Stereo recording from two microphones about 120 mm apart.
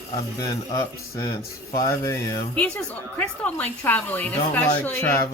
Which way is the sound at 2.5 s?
10° left (ahead or behind).